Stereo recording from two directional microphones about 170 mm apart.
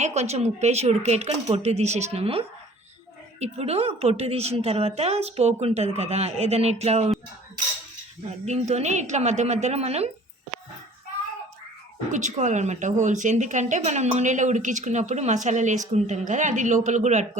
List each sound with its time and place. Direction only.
0.0 s a woman's voice: 40° right (ahead or behind)
8.4 s a woman's voice: 40° right (ahead or behind)
12.1 s speech: 45° right (ahead or behind)